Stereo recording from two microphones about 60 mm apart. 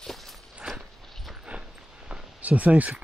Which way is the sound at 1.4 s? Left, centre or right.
Centre.